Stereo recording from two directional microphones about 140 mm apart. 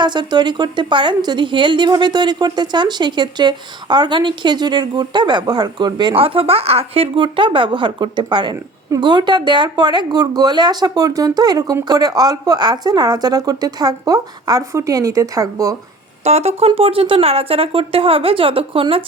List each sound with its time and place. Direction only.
0.0 s speech: 30° right (ahead or behind)
16.2 s speech: 50° right (ahead or behind)